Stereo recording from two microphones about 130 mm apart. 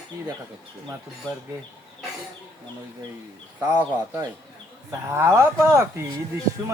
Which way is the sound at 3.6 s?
15° right (ahead or behind).